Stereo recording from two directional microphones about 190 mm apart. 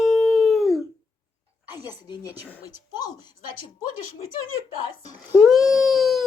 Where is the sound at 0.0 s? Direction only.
Centre (ahead or behind).